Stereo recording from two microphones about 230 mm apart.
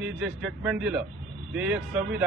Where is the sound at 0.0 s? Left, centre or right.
Centre.